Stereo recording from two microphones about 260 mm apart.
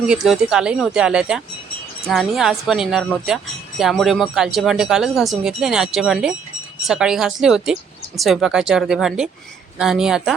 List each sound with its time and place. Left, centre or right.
0.1 s speech: centre